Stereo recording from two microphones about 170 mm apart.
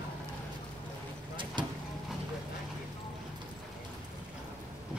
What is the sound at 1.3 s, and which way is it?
Vehicle, 30° right (ahead or behind).